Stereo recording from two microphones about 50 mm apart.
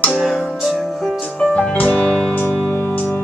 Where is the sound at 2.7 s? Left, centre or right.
Left.